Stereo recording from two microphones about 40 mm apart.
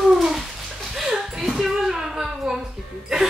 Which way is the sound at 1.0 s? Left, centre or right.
Centre.